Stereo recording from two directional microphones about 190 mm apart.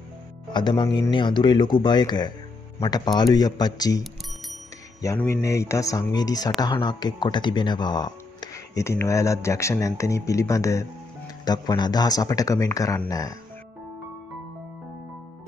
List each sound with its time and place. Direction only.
0.5 s speech: 25° left (ahead or behind)
5.0 s speech: 10° left (ahead or behind)